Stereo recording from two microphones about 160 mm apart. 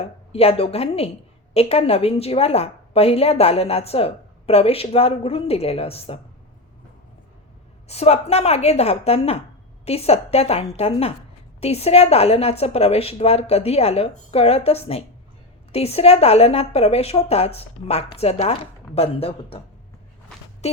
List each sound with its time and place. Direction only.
0.0 s a woman's voice: 40° left (ahead or behind)
7.9 s a woman's voice: 40° left (ahead or behind)